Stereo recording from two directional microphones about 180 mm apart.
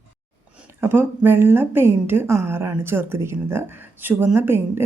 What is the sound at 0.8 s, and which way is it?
A woman's voice, 10° right (ahead or behind).